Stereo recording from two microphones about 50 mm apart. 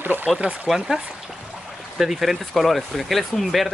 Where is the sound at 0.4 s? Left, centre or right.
Right.